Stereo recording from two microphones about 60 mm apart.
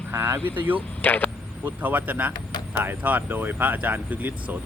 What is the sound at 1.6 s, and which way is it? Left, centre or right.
A man's voice, right.